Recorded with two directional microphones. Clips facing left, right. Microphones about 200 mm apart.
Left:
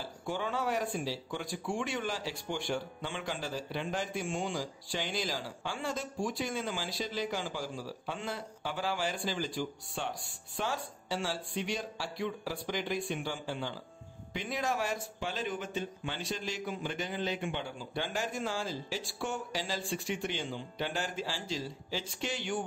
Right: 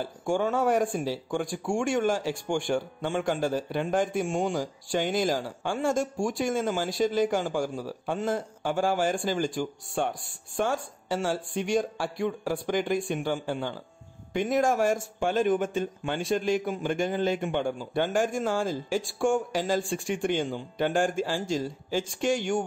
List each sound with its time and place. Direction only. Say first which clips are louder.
0.0 s speech: right 9 dB; 50° right (ahead or behind)